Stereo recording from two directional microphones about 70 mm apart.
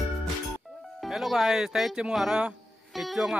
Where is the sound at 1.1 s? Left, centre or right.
Centre.